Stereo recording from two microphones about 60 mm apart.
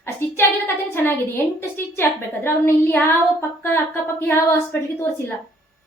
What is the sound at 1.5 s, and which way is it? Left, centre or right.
Speech, left.